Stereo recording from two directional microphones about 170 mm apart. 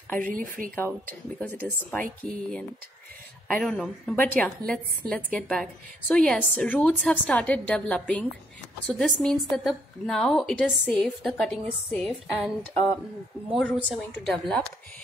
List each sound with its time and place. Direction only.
0.2 s speech: 55° right (ahead or behind)
1.4 s a woman's voice: 10° left (ahead or behind)
3.4 s a woman's voice: 5° left (ahead or behind)